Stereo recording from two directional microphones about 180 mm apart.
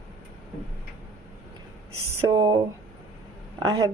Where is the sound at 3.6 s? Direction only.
20° right (ahead or behind).